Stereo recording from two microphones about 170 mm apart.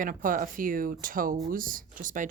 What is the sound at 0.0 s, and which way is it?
Speech, 55° right (ahead or behind).